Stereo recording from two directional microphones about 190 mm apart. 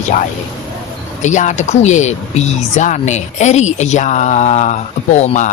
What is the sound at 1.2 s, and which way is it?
Speech, 40° left (ahead or behind).